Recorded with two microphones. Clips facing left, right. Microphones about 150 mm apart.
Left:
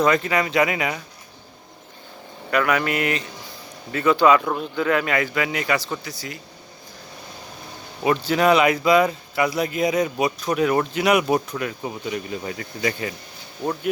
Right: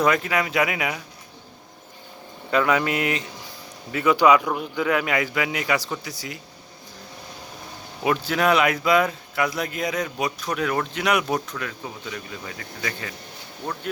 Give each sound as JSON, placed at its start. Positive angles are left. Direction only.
{"t": 0.0, "sound": "speech", "side_deg": -5}
{"t": 2.5, "sound": "speech", "side_deg": -25}
{"t": 8.0, "sound": "speech", "side_deg": 0}
{"t": 11.5, "sound": "speech", "side_deg": 20}